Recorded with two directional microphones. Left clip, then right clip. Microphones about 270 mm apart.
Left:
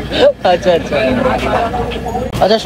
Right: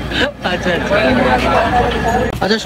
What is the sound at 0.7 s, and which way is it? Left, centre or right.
Speech, centre.